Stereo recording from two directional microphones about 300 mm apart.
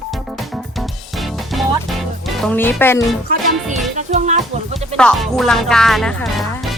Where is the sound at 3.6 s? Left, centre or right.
Centre.